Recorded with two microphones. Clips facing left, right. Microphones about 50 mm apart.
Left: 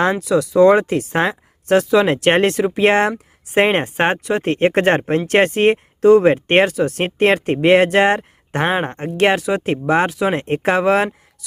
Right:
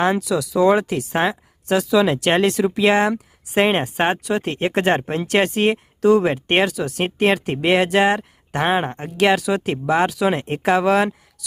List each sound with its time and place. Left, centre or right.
0.1 s speech: left
9.0 s speech: left